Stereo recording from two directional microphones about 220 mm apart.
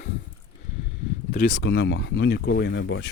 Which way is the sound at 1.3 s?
40° left (ahead or behind).